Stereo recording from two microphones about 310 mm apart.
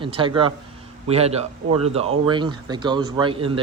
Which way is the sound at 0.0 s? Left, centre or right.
Centre.